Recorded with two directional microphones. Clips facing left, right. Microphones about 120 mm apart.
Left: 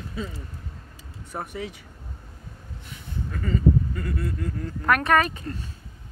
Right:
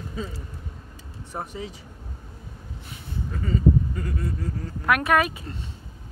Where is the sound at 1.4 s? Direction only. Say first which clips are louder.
Left 1 dB; 30° right (ahead or behind).